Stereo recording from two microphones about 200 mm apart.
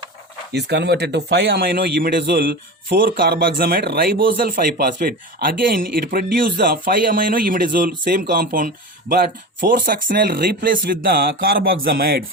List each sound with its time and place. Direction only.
0.5 s speech: 55° right (ahead or behind)